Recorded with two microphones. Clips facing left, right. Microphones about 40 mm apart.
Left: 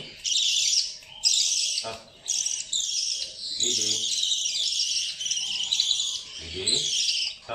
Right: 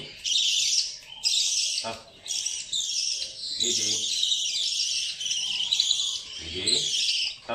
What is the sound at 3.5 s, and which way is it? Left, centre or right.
Bird, centre.